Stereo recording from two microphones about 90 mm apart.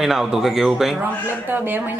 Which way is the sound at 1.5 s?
20° right (ahead or behind).